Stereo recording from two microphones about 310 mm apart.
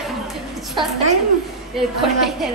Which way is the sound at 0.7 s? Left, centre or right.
Centre.